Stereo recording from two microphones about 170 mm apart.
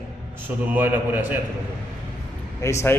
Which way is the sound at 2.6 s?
15° left (ahead or behind).